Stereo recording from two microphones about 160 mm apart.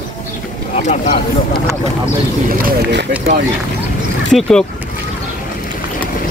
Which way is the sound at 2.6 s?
90° right.